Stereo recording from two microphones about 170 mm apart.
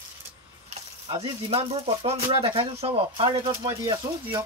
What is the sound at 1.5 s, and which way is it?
Speech, 35° right (ahead or behind).